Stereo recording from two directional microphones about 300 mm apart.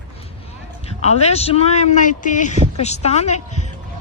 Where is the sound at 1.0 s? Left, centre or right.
Left.